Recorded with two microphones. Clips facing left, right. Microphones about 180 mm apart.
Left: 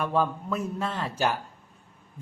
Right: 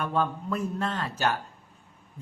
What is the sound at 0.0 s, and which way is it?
Speech, 5° left (ahead or behind).